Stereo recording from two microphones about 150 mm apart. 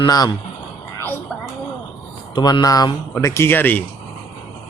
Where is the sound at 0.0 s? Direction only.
25° left (ahead or behind).